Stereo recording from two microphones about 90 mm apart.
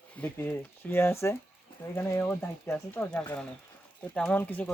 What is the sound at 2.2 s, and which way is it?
Speech, 20° left (ahead or behind).